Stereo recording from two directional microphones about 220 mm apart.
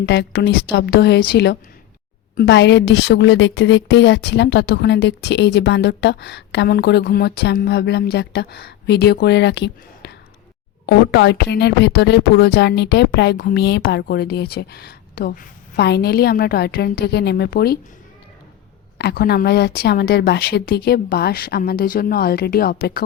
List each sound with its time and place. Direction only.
0.0 s a woman's voice: 50° left (ahead or behind)
18.9 s a woman's voice: 45° left (ahead or behind)